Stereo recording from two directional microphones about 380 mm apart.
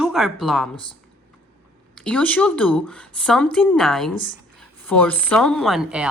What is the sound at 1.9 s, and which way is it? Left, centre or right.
Speech, centre.